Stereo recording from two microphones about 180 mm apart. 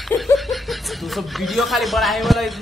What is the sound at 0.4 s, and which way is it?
Speech, centre (ahead or behind).